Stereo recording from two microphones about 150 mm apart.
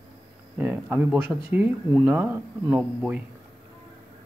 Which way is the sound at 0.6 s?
10° right (ahead or behind).